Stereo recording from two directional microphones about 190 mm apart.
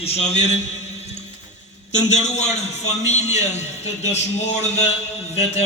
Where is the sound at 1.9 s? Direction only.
35° left (ahead or behind).